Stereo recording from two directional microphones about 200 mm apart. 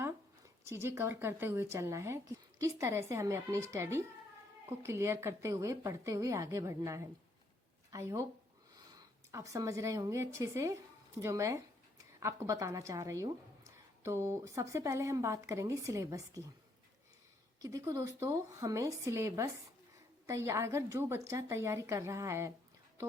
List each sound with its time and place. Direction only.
0.6 s a woman's voice: 10° right (ahead or behind)
17.6 s a woman's voice: 15° right (ahead or behind)